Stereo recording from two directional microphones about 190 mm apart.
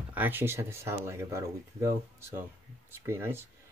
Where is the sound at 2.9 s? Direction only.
15° right (ahead or behind).